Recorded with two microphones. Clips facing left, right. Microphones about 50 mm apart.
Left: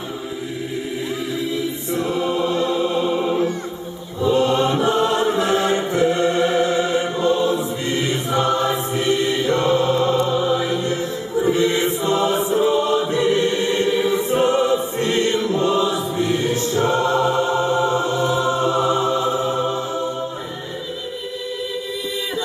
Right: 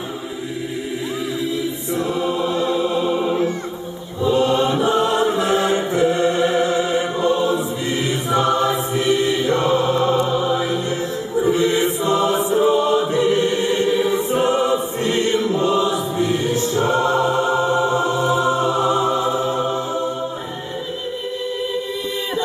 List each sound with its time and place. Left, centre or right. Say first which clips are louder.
2.0 s choir: left 1 dB; centre
3.1 s music: even; centre
4.8 s chant: right 1 dB; centre
5.5 s choir: right 1 dB; centre
9.0 s mantra: right 1 dB; right
9.6 s chant: even; centre
11.5 s mantra: right 1 dB; centre
12.6 s choir: right 2 dB; centre
14.4 s music: even; centre
15.3 s chant: right 1 dB; centre
16.1 s music: right 1 dB; centre
16.7 s choir: even; centre
17.4 s music: right 1 dB; centre